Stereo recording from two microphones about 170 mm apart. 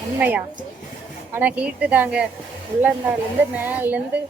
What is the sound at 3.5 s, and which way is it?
Speech, 10° right (ahead or behind).